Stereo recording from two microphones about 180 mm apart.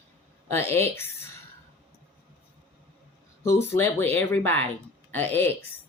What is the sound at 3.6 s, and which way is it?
Speech, 15° left (ahead or behind).